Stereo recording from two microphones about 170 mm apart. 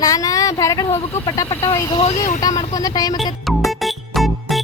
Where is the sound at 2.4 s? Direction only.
20° left (ahead or behind).